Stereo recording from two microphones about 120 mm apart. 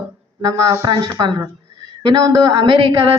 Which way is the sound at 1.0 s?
30° right (ahead or behind).